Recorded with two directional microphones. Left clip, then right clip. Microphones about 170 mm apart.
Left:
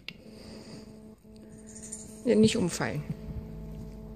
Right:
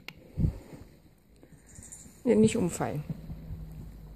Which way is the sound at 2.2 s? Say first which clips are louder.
Even; 10° right (ahead or behind).